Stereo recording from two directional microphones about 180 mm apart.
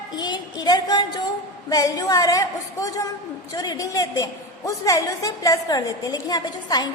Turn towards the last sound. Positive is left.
turn(degrees=25)  # may be behind; listen again after turning